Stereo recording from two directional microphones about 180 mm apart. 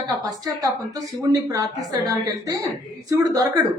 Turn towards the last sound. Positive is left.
turn(degrees=-20)  # may be behind; listen again after turning